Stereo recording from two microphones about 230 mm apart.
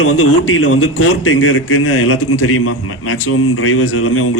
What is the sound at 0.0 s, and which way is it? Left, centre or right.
A man's voice, left.